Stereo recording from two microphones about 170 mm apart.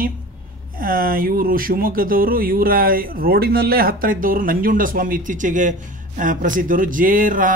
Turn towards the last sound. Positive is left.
turn(degrees=-50)  # may be behind; listen again after turning